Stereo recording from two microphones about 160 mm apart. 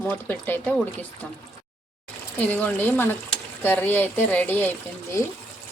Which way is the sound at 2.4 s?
10° left (ahead or behind).